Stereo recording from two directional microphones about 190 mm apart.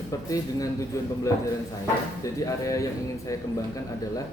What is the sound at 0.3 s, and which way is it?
A man's voice, 15° left (ahead or behind).